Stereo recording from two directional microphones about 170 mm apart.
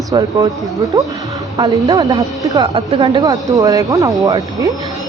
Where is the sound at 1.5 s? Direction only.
25° right (ahead or behind).